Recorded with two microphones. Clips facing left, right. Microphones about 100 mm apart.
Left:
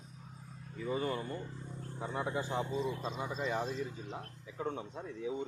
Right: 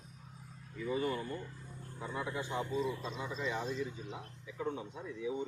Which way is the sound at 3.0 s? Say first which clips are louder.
Left 2 dB; 40° left (ahead or behind).